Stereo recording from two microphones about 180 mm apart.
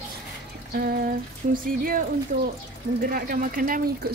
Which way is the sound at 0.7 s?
55° right (ahead or behind).